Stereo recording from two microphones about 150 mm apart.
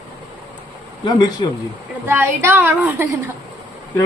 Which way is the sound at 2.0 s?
15° right (ahead or behind).